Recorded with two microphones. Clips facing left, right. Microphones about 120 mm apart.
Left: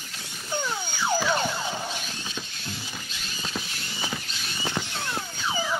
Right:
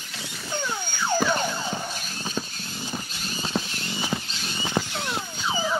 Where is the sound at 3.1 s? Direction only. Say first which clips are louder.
Right 5 dB; 35° right (ahead or behind).